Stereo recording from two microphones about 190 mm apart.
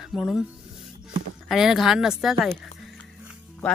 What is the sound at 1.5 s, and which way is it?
Speech, centre (ahead or behind).